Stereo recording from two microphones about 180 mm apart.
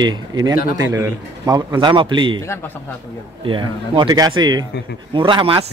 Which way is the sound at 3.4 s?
25° right (ahead or behind).